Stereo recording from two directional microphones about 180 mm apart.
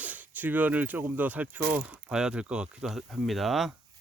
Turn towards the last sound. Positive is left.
turn(degrees=0)  # may be behind; listen again after turning